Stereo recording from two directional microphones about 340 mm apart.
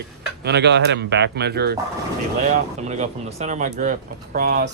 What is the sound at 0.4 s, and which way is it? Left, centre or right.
Speech, right.